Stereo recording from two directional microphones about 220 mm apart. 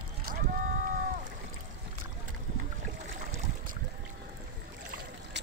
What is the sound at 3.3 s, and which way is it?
Boat, 35° right (ahead or behind).